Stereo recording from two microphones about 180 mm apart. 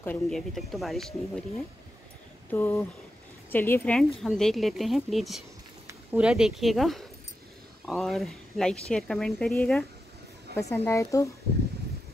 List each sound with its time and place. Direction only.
0.0 s speech: 10° left (ahead or behind)
2.5 s speech: 10° left (ahead or behind)
10.5 s speech: 15° left (ahead or behind)